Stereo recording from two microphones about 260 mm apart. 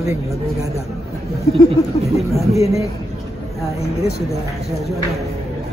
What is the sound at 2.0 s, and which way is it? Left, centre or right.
Speech, centre.